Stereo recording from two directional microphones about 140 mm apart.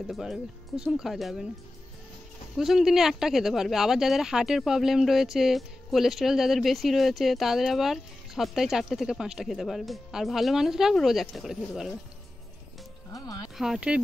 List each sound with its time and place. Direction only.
0.0 s speech: centre (ahead or behind)
2.5 s speech: centre (ahead or behind)
13.1 s music: 25° left (ahead or behind)
13.6 s speech: 5° right (ahead or behind)